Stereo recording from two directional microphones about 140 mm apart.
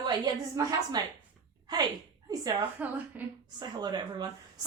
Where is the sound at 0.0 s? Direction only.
25° right (ahead or behind).